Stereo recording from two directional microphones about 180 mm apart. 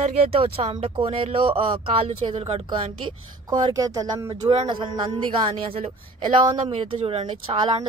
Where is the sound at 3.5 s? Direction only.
20° right (ahead or behind).